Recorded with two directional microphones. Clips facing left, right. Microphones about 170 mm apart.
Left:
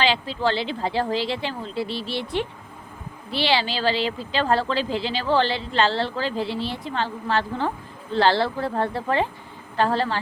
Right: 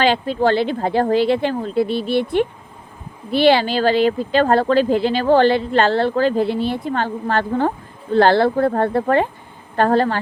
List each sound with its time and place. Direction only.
0.0 s speech: 50° right (ahead or behind)